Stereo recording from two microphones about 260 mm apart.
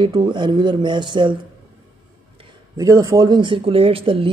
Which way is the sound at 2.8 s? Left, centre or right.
Centre.